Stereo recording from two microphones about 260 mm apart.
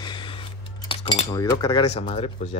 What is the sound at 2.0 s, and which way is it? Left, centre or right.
Speech, left.